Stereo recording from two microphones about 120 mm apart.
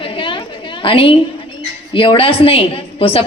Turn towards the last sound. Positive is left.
turn(degrees=55)  # may be behind; listen again after turning